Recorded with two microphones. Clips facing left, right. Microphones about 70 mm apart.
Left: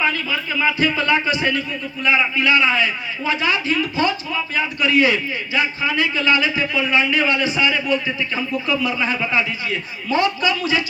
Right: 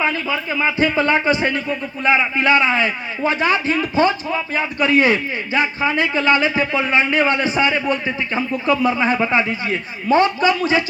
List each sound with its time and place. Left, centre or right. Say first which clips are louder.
0.0 s a man's voice: right 1 dB; right